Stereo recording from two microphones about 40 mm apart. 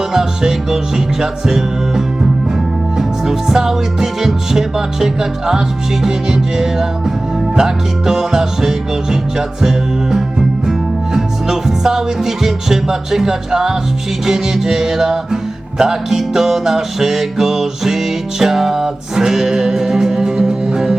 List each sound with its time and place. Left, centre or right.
0.1 s music: centre